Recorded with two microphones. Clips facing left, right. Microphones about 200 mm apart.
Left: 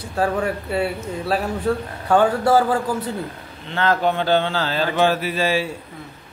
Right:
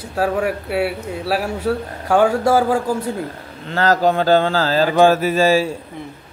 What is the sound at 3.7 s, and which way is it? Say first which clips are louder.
Speech: right 4 dB; 40° right (ahead or behind).